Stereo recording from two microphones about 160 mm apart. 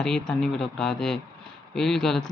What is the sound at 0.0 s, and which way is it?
Speech, 5° left (ahead or behind).